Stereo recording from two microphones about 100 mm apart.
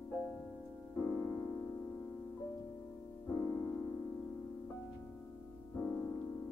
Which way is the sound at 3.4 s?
30° left (ahead or behind).